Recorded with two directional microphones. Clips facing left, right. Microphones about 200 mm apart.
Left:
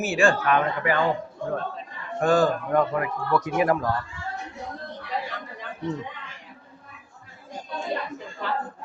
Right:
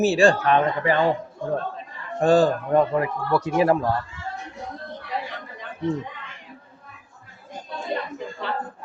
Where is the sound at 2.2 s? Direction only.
30° right (ahead or behind).